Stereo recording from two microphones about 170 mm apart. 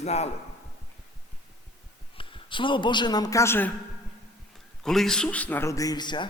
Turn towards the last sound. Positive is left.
turn(degrees=25)  # may be behind; listen again after turning